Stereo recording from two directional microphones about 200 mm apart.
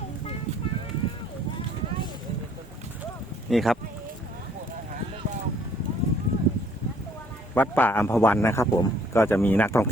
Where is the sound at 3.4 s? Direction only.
Centre (ahead or behind).